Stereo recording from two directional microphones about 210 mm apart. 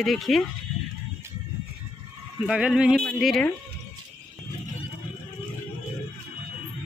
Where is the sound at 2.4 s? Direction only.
5° right (ahead or behind).